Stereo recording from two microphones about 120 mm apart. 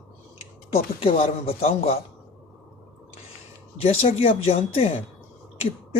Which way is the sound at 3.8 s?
55° left (ahead or behind).